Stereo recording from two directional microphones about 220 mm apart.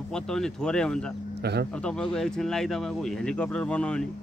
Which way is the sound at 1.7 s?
5° left (ahead or behind).